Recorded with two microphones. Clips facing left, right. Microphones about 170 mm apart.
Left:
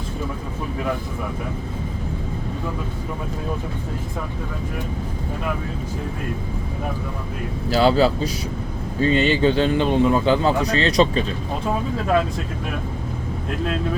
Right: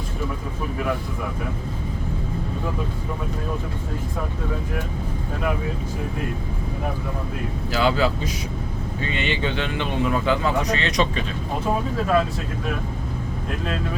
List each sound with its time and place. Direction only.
7.7 s a man's voice: 35° left (ahead or behind)